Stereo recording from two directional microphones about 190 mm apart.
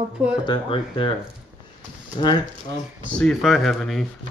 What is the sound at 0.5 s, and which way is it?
Speech, 25° left (ahead or behind).